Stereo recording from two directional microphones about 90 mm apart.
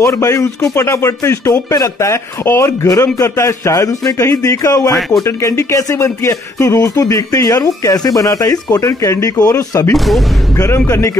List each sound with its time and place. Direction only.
0.0 s speech: 35° left (ahead or behind)
9.9 s speech: centre (ahead or behind)
10.9 s speech: 35° left (ahead or behind)